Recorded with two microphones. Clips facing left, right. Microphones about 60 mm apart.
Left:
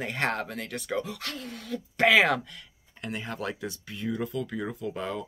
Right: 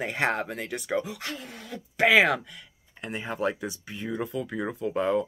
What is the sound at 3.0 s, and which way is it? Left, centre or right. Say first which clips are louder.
Speech: right 4 dB; centre.